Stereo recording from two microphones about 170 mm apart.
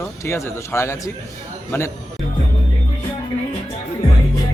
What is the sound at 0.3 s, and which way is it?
Speech, 15° left (ahead or behind).